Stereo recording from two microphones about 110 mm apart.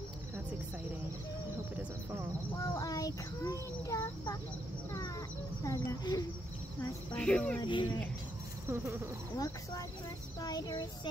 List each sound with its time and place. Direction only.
2.5 s child singing: 30° left (ahead or behind)
5.6 s a sound: 30° left (ahead or behind)
7.2 s speech: 10° left (ahead or behind)
7.6 s speech: 45° left (ahead or behind)
8.6 s a sound: 20° right (ahead or behind)
10.4 s child singing: 40° left (ahead or behind)